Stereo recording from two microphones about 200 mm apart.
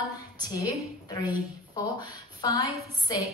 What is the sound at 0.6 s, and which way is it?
A woman's voice, 20° left (ahead or behind).